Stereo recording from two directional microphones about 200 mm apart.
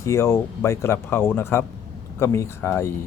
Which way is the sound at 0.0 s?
15° left (ahead or behind).